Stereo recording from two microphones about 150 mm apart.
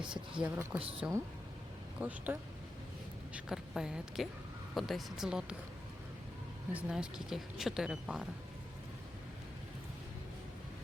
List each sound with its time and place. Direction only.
0.0 s speech: 5° right (ahead or behind)
0.8 s speech: 40° right (ahead or behind)
2.0 s speech: 10° right (ahead or behind)
6.7 s speech: 5° right (ahead or behind)